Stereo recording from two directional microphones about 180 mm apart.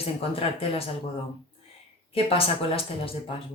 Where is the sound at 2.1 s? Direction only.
30° left (ahead or behind).